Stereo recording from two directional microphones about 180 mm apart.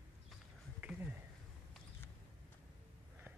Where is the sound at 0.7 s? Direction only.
5° right (ahead or behind).